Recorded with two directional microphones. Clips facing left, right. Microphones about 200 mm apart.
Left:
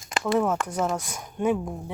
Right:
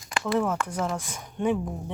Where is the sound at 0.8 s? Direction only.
10° left (ahead or behind).